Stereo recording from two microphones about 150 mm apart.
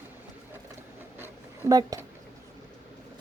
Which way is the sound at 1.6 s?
20° right (ahead or behind).